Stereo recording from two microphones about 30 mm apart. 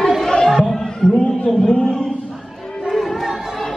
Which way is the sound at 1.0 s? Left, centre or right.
Left.